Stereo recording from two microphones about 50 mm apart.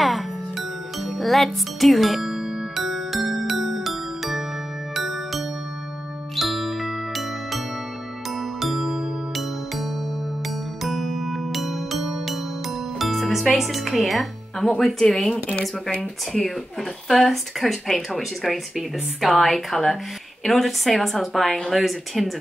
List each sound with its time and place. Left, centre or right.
0.0 s music: centre
13.6 s speech: centre
17.1 s speech: centre